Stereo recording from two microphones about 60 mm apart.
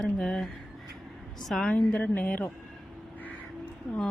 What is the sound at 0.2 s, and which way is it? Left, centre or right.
A woman's voice, centre.